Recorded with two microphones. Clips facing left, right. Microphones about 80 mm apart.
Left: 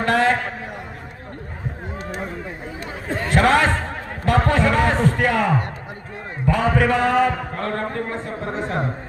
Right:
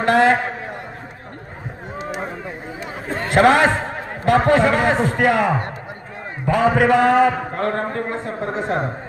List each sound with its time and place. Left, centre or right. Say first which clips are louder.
0.0 s a man's voice: right 3 dB; centre
3.2 s a man's voice: right 3 dB; centre